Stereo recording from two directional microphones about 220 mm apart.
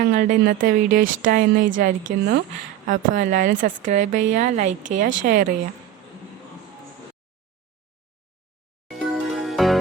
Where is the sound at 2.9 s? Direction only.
35° right (ahead or behind).